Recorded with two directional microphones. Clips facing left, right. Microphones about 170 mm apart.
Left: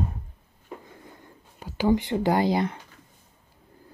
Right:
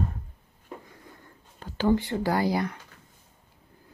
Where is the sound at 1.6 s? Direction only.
15° left (ahead or behind).